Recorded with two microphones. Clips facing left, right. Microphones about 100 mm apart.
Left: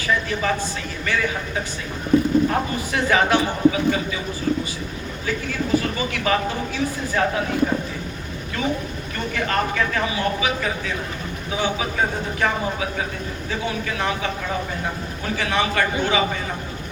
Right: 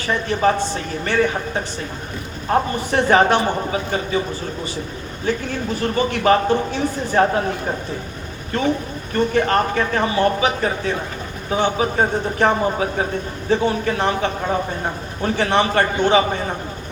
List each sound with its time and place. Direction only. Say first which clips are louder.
0.1 s speech: right 4 dB; 40° right (ahead or behind)
5.2 s speech: right 4 dB; 40° right (ahead or behind)
9.1 s speech: right 7 dB; 40° right (ahead or behind)